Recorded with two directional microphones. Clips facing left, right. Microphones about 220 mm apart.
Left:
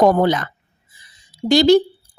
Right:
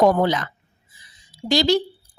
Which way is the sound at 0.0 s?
50° left (ahead or behind).